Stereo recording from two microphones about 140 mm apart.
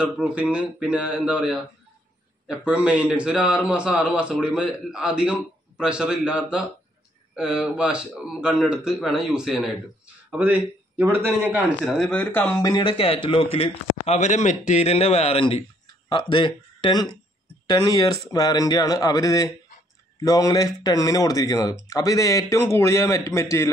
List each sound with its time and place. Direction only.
0.0 s a man's voice: 5° right (ahead or behind)
12.0 s speech: 10° left (ahead or behind)
12.8 s a man's voice: 45° left (ahead or behind); by 23.7 s 20° left (ahead or behind)